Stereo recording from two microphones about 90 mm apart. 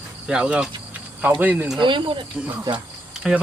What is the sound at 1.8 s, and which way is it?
Speech, 65° right (ahead or behind).